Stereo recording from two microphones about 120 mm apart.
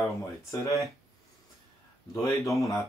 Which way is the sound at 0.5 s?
25° left (ahead or behind).